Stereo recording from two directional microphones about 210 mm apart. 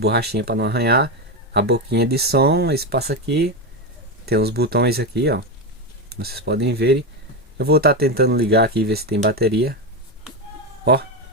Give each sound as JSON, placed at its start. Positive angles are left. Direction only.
{"t": 0.0, "sound": "speech", "side_deg": -50}